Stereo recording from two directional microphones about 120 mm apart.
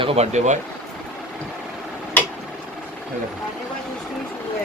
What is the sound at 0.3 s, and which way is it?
Speech, 80° right.